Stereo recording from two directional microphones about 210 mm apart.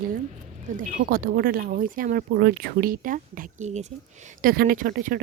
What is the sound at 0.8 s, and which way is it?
Speech, 40° right (ahead or behind).